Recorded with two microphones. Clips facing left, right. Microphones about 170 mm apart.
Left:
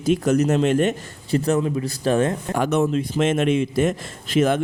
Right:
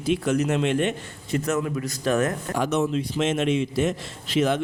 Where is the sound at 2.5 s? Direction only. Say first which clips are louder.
Left 4 dB; 55° left (ahead or behind).